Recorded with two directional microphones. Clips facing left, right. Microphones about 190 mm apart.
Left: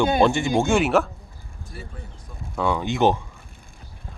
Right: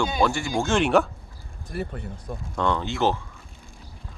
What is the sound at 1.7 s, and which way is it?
Speech, 65° right (ahead or behind).